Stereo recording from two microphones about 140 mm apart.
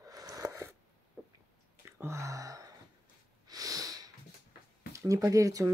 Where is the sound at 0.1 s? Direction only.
25° right (ahead or behind).